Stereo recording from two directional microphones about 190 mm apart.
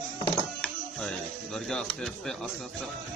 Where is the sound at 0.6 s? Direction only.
5° left (ahead or behind).